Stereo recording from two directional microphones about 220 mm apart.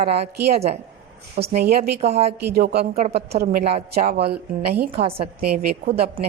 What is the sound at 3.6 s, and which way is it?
Speech, 30° right (ahead or behind).